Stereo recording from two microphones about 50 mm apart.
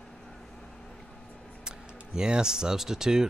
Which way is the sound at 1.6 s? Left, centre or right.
Centre.